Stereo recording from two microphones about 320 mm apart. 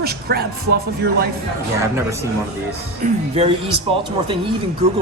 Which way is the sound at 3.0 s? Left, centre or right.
Right.